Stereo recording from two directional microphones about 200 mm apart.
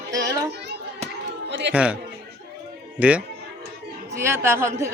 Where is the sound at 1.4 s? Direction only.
60° right (ahead or behind).